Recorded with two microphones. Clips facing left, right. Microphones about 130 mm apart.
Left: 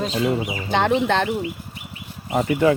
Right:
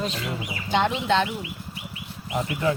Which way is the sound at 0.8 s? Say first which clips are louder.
Left 4 dB; 55° left (ahead or behind).